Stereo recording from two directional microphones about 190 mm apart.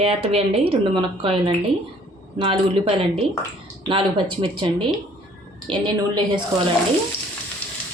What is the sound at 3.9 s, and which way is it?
Speech, 25° right (ahead or behind).